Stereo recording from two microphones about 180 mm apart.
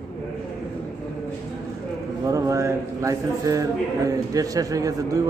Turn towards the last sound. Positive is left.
turn(degrees=-20)  # may be behind; listen again after turning